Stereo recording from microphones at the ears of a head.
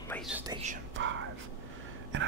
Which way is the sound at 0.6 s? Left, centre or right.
Right.